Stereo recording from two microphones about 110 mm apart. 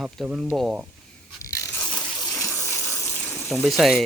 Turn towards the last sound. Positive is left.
turn(degrees=0)  # may be behind; listen again after turning